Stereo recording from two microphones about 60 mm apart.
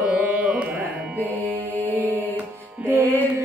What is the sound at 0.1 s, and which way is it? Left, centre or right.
Carnatic music, right.